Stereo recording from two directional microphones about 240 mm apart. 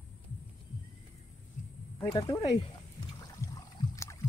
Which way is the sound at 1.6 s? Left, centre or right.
Left.